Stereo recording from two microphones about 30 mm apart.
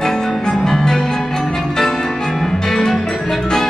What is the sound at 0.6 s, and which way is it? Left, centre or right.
Music, centre.